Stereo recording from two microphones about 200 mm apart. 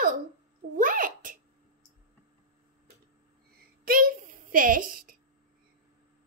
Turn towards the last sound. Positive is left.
turn(degrees=-45)  # may be behind; listen again after turning